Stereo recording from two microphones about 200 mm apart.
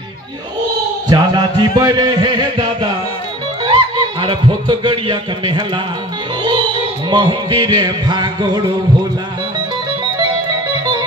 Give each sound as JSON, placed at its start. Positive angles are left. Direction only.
{"t": 1.0, "sound": "music", "side_deg": -20}
{"t": 3.6, "sound": "speech", "side_deg": -20}
{"t": 7.1, "sound": "music", "side_deg": -25}